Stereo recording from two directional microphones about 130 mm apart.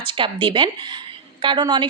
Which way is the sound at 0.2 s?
40° right (ahead or behind).